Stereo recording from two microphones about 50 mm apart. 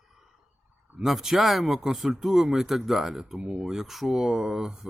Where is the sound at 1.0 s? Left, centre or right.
Centre.